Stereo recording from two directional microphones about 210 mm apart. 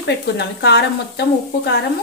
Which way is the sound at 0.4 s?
55° left (ahead or behind).